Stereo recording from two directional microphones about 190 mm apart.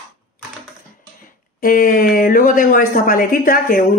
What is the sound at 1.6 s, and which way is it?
Speech, 45° left (ahead or behind).